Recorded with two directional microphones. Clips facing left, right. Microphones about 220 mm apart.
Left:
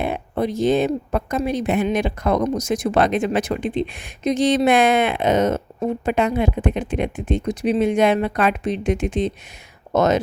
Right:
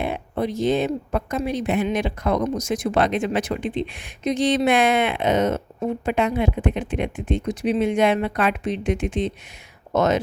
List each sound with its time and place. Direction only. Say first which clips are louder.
0.0 s speech: left 2 dB; 45° left (ahead or behind)